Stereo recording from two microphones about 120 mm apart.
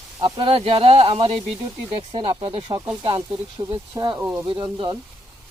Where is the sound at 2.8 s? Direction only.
15° right (ahead or behind).